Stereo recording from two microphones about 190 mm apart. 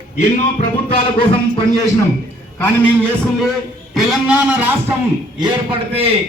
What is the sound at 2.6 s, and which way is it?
Speech, 10° left (ahead or behind).